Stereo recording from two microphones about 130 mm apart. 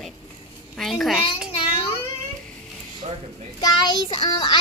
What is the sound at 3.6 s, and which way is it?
Child singing, 30° left (ahead or behind).